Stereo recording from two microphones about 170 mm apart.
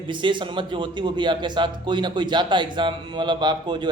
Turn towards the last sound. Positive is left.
turn(degrees=-25)  # may be behind; listen again after turning